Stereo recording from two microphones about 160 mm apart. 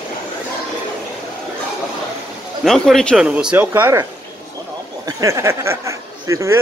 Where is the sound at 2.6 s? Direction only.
Centre (ahead or behind).